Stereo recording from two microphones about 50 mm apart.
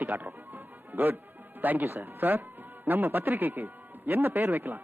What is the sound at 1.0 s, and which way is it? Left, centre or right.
A man's voice, right.